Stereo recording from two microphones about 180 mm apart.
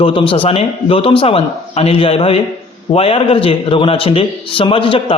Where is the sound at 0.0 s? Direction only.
30° left (ahead or behind).